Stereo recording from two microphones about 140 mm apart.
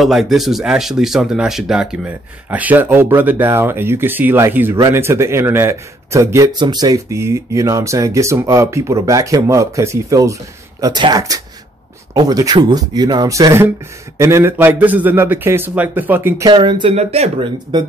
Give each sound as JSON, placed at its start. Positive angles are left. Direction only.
{"t": 0.0, "sound": "speech", "side_deg": 0}
{"t": 6.5, "sound": "speech", "side_deg": -30}
{"t": 16.4, "sound": "speech", "side_deg": -30}
{"t": 16.9, "sound": "speech", "side_deg": -50}